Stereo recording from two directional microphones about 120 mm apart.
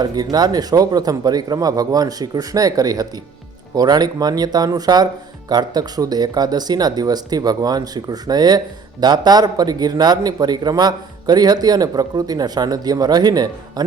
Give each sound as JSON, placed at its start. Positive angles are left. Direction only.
{"t": 0.0, "sound": "speech", "side_deg": -35}